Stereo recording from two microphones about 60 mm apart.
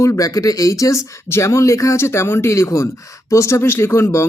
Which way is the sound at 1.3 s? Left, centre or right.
Left.